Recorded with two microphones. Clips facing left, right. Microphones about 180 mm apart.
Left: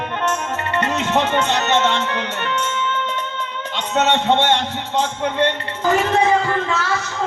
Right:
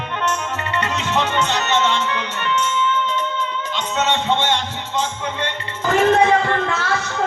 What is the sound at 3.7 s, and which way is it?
Speech, 60° left (ahead or behind).